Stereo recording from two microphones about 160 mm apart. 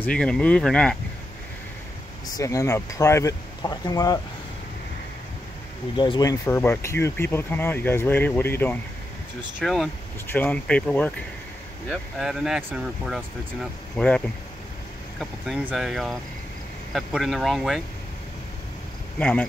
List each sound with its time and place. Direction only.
0.0 s speech: 5° left (ahead or behind)
2.3 s speech: 20° left (ahead or behind)
5.9 s speech: 25° left (ahead or behind)
9.6 s speech: centre (ahead or behind)
10.2 s speech: 10° left (ahead or behind)
19.1 s speech: 10° left (ahead or behind)